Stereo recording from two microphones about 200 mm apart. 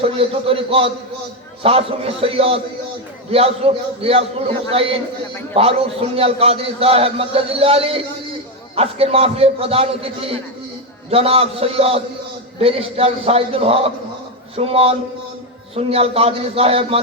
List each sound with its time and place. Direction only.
0.0 s a man's voice: 30° right (ahead or behind)